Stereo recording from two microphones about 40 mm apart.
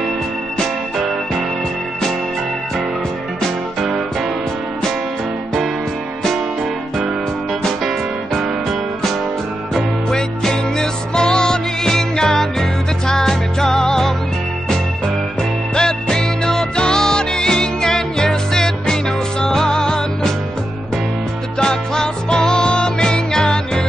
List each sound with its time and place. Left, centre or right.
10.0 s music: centre
15.7 s music: centre
21.5 s music: centre